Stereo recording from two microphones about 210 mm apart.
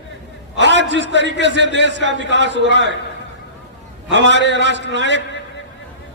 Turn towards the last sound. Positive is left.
turn(degrees=-60)  # may be behind; listen again after turning